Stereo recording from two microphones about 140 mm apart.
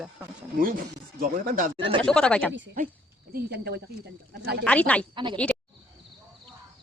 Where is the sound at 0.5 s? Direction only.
90° right.